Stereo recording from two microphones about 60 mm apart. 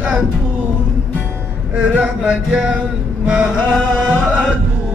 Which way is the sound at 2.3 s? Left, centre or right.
Centre.